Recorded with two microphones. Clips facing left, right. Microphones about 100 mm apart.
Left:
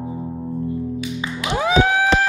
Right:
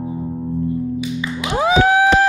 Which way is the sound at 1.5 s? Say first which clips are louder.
Right 3 dB; 15° right (ahead or behind).